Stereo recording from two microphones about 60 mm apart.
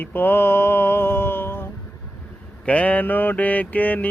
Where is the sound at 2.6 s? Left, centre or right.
Left.